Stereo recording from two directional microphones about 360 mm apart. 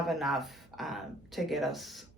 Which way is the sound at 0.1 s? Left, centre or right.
Centre.